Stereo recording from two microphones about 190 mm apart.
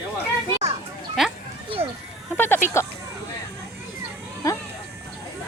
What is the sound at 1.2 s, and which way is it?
Speech, centre (ahead or behind).